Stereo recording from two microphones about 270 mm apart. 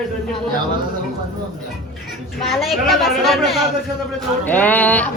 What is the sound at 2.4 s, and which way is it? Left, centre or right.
Speech, centre.